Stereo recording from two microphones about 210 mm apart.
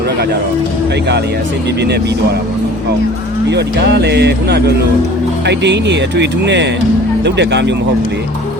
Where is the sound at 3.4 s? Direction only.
55° right (ahead or behind).